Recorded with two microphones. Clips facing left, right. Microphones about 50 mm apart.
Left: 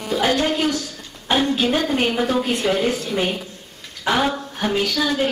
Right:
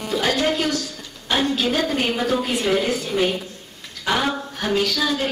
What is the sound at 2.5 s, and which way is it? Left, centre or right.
Speech, centre.